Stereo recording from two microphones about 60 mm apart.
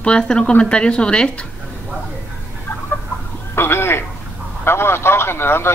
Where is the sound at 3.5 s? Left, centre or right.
Left.